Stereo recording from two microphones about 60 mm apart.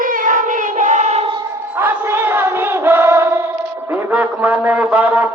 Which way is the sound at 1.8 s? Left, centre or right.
Right.